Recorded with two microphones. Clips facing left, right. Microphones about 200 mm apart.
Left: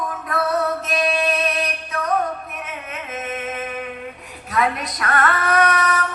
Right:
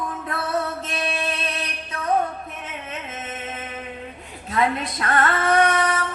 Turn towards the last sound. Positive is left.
turn(degrees=-25)  # may be behind; listen again after turning